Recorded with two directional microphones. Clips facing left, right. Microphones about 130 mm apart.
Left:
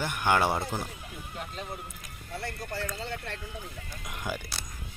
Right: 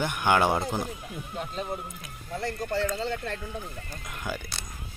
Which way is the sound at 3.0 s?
55° right (ahead or behind).